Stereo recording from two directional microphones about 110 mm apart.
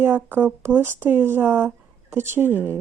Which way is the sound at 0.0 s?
15° right (ahead or behind).